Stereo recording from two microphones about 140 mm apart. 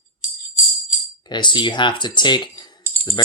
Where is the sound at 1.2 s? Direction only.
30° left (ahead or behind).